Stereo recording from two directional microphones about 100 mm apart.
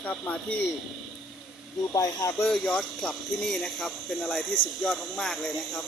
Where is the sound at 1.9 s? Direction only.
35° left (ahead or behind).